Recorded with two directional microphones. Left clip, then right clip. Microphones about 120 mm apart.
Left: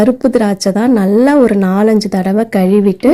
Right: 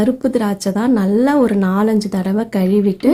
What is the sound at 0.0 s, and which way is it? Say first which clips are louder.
Speech: left 6 dB; 30° left (ahead or behind).